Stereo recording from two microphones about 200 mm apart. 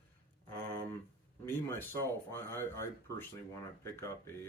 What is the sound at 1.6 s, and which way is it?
Speech, 10° left (ahead or behind).